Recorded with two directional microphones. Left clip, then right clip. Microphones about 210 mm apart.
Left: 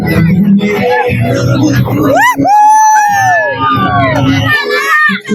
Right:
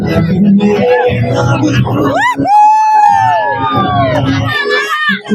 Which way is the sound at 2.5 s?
15° left (ahead or behind).